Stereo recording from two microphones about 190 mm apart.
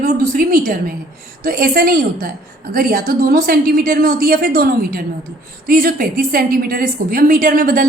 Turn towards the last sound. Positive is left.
turn(degrees=-45)  # may be behind; listen again after turning